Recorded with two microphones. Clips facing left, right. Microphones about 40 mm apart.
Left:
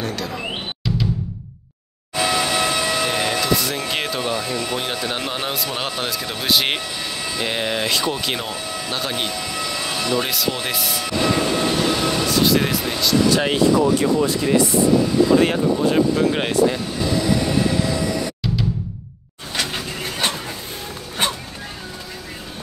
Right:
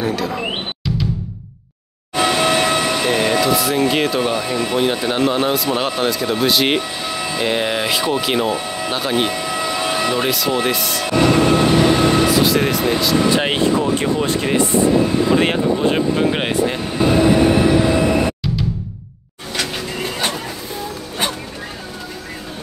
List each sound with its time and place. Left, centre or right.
0.0 s a sound: centre
2.1 s vehicle: right
2.9 s vehicle: right
4.2 s speech: centre
7.1 s speech: centre
9.6 s vehicle: right
10.2 s speech: centre
11.1 s train: right
11.7 s train: right
12.3 s speech: centre
13.3 s speech: right
16.6 s vehicle: right